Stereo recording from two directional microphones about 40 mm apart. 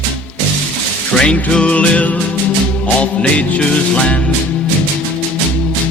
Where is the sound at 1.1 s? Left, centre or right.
Left.